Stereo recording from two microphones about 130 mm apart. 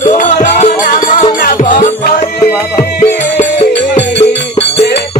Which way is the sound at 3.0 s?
60° left (ahead or behind).